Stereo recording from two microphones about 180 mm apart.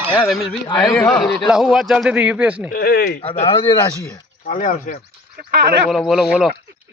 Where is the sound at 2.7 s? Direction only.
55° left (ahead or behind).